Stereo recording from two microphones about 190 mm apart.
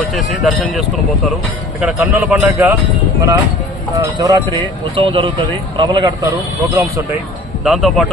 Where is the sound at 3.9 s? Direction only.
20° right (ahead or behind).